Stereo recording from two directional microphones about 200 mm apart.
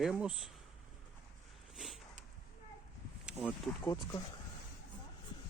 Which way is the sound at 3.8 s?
15° left (ahead or behind).